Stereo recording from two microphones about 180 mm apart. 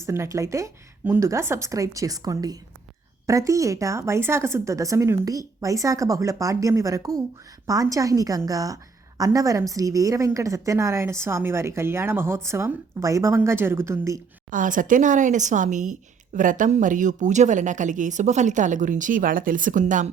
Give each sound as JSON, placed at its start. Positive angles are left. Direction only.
{"t": 0.0, "sound": "a woman's voice", "side_deg": -15}
{"t": 14.5, "sound": "speech", "side_deg": -45}